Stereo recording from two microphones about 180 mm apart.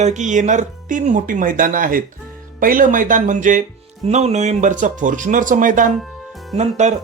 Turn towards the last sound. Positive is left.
turn(degrees=-40)  # may be behind; listen again after turning